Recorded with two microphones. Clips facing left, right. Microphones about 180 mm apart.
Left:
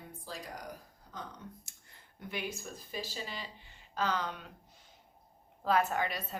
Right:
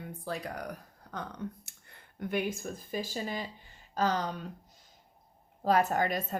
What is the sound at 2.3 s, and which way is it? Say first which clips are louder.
Speech: right 7 dB; 50° right (ahead or behind).